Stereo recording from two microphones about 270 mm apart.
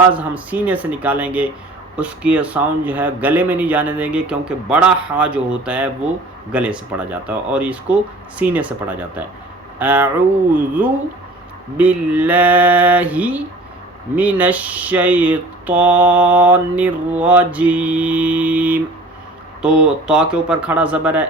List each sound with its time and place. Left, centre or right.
0.1 s speech: centre